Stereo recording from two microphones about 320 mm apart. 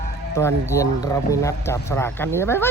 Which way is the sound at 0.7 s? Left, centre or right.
Centre.